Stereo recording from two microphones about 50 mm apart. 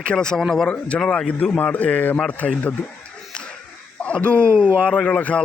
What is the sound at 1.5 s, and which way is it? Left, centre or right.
Speech, left.